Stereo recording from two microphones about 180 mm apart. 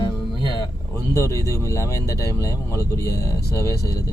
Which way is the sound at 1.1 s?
15° left (ahead or behind).